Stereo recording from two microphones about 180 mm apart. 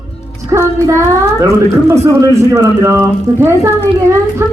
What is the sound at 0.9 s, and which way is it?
Speech, 15° right (ahead or behind).